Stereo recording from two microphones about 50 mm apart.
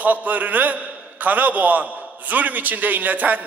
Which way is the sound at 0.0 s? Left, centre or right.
Right.